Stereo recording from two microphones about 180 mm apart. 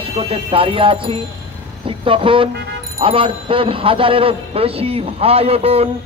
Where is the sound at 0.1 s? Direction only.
35° right (ahead or behind).